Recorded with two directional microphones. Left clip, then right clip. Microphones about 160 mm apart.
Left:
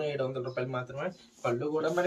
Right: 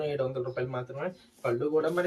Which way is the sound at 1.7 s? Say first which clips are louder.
Right 2 dB; 20° right (ahead or behind).